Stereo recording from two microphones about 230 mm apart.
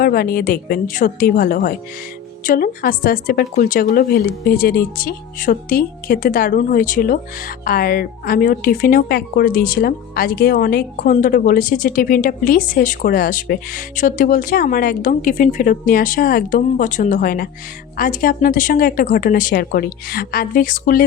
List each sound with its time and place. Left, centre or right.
0.0 s a woman's voice: left